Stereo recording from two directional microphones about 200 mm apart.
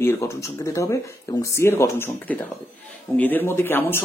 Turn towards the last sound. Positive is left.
turn(degrees=10)  # may be behind; listen again after turning